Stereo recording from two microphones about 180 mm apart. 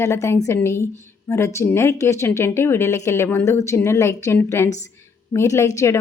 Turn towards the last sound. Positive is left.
turn(degrees=15)  # may be behind; listen again after turning